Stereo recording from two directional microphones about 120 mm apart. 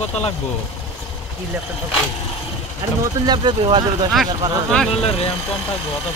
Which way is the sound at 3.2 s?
40° right (ahead or behind).